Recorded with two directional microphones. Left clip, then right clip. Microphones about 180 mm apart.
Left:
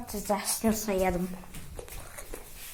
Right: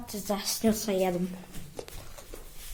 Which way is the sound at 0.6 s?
20° right (ahead or behind).